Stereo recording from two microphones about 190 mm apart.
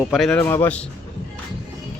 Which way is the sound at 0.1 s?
Centre (ahead or behind).